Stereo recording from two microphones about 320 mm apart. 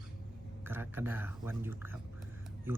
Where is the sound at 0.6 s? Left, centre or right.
Centre.